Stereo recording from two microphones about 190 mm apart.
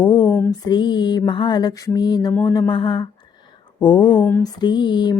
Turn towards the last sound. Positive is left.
turn(degrees=25)  # may be behind; listen again after turning